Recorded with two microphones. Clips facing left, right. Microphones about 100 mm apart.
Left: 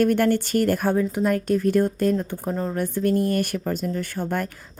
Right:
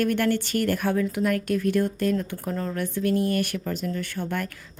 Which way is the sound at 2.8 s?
45° left (ahead or behind).